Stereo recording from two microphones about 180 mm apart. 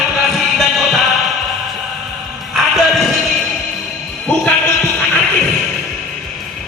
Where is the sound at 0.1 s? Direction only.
Centre (ahead or behind).